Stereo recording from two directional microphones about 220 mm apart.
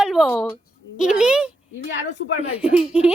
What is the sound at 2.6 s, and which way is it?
Speech, 5° right (ahead or behind).